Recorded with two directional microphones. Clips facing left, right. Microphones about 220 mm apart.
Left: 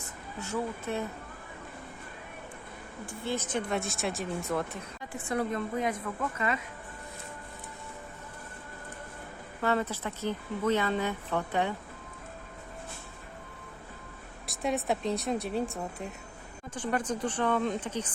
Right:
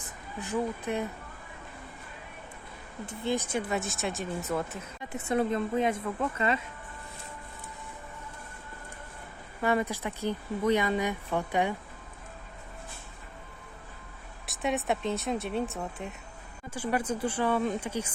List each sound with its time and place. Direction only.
0.0 s speech: 15° right (ahead or behind)
3.1 s speech: 15° right (ahead or behind)
5.1 s a woman's voice: 25° right (ahead or behind)
9.6 s speech: 15° right (ahead or behind)
14.4 s speech: centre (ahead or behind)